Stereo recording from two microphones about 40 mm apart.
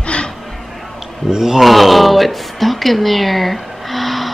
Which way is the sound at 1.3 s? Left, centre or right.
Centre.